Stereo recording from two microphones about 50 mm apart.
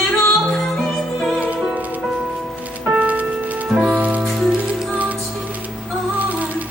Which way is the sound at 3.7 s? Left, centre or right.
Centre.